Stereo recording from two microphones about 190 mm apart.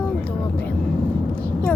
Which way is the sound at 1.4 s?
5° left (ahead or behind).